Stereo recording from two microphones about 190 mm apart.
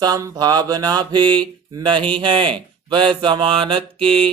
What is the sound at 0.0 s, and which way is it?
Mantra, 15° right (ahead or behind).